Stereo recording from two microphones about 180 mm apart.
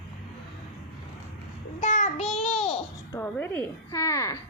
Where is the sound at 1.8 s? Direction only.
40° left (ahead or behind).